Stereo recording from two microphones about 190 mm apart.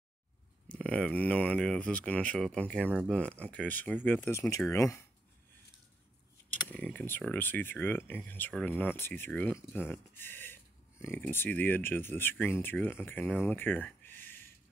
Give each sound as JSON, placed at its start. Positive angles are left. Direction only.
{"t": 0.7, "sound": "speech", "side_deg": 5}
{"t": 6.7, "sound": "speech", "side_deg": 5}